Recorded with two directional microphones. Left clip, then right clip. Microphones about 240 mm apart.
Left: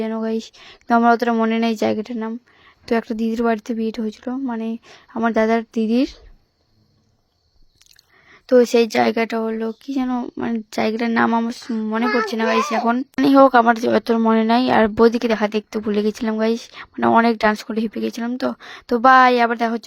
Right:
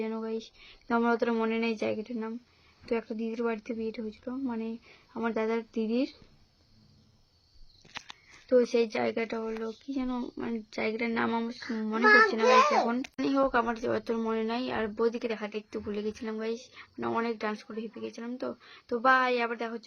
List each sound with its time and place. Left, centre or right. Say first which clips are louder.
0.0 s speech: left 11 dB; left
8.4 s speech: left 11 dB; left
12.0 s a child's voice: right 1 dB; centre
12.3 s speech: left 3 dB; left